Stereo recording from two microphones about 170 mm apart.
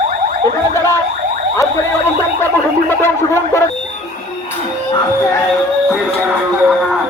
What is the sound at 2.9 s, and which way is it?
Speech, 15° left (ahead or behind).